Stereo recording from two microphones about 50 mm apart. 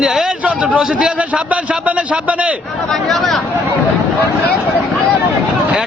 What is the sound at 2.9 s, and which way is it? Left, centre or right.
Speech, centre.